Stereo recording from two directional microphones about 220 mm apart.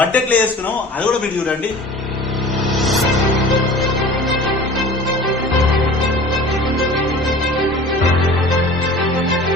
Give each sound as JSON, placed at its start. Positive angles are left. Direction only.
{"t": 0.0, "sound": "a man's voice", "side_deg": 5}
{"t": 2.8, "sound": "music", "side_deg": 0}